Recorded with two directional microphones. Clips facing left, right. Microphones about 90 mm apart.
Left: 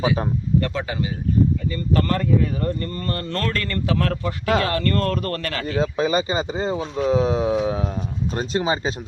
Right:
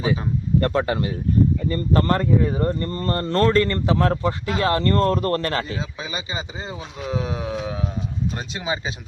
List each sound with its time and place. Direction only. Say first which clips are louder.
0.6 s speech: right 4 dB; 50° right (ahead or behind)
1.7 s speech: right 2 dB; 30° right (ahead or behind)
5.7 s speech: left 10 dB; 45° left (ahead or behind)